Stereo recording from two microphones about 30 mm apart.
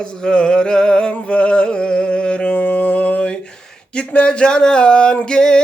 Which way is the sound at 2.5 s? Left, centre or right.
Left.